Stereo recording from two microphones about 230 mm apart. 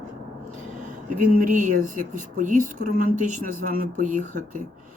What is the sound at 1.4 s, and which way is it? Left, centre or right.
Speech, right.